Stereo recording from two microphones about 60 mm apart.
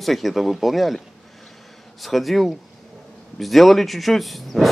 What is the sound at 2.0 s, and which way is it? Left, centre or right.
A man's voice, centre.